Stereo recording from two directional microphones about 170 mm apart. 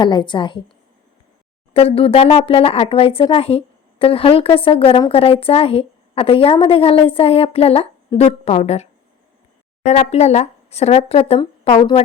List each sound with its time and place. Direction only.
0.0 s a woman's voice: 25° left (ahead or behind)
1.7 s speech: 35° left (ahead or behind)